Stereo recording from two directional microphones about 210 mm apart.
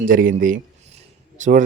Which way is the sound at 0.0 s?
40° right (ahead or behind).